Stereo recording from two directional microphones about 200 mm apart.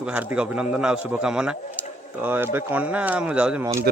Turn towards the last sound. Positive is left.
turn(degrees=-15)  # may be behind; listen again after turning